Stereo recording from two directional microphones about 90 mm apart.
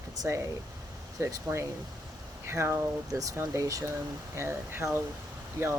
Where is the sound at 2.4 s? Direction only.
30° right (ahead or behind).